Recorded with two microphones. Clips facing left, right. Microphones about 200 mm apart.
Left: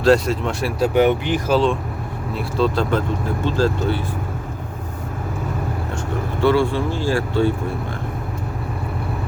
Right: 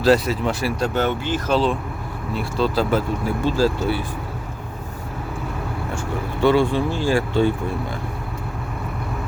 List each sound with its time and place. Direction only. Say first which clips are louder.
0.0 s speech: left 1 dB; centre (ahead or behind)
0.9 s speech: left 5 dB; 15° left (ahead or behind)
2.3 s speech: left 1 dB; centre (ahead or behind)
6.4 s speech: even; 15° right (ahead or behind)